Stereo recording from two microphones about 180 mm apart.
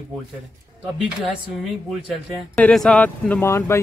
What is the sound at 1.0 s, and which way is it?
Speech, centre (ahead or behind).